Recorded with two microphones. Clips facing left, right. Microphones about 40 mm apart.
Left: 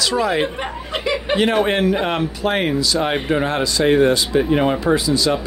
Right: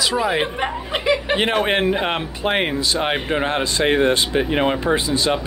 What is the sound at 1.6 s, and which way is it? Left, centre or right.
Speech, right.